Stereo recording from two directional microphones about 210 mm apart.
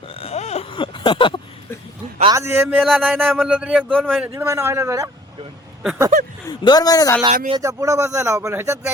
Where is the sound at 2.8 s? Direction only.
Centre (ahead or behind).